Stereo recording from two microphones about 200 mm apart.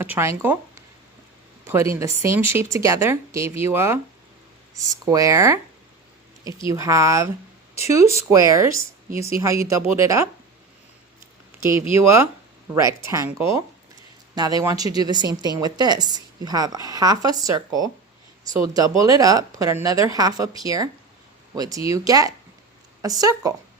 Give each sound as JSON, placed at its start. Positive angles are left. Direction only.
{"t": 0.0, "sound": "speech", "side_deg": -15}
{"t": 1.6, "sound": "speech", "side_deg": -15}
{"t": 6.7, "sound": "speech", "side_deg": -15}
{"t": 8.3, "sound": "speech", "side_deg": -15}
{"t": 11.7, "sound": "a woman's voice", "side_deg": -15}